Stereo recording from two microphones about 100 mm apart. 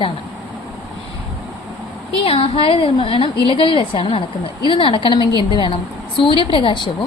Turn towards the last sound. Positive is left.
turn(degrees=55)  # may be behind; listen again after turning